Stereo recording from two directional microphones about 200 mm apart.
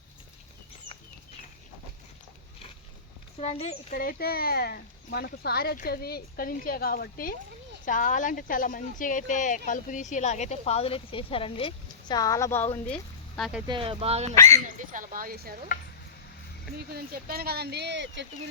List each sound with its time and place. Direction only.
3.4 s speech: 30° left (ahead or behind)
3.9 s speech: 50° left (ahead or behind); by 13.6 s 5° left (ahead or behind)
13.7 s speech: 25° right (ahead or behind)
14.3 s speech: 15° left (ahead or behind)
14.8 s speech: 40° right (ahead or behind)
16.7 s speech: 50° right (ahead or behind)